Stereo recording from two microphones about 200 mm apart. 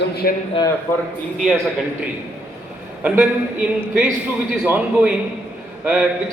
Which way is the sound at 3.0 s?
5° right (ahead or behind).